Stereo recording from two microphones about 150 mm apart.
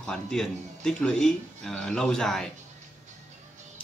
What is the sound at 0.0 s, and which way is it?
Speech, 5° left (ahead or behind).